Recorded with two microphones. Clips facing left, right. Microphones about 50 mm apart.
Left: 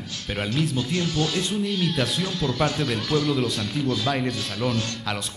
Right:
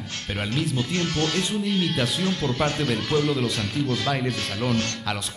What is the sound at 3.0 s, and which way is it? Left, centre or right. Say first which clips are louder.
Speech: even; right.